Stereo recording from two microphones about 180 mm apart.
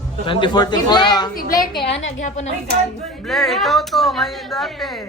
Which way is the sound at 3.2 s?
Centre (ahead or behind).